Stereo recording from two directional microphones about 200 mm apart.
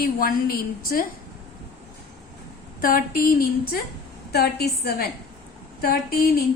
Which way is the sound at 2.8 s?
45° left (ahead or behind).